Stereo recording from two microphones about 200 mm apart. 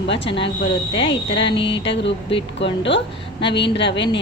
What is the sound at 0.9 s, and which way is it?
Speech, 25° left (ahead or behind).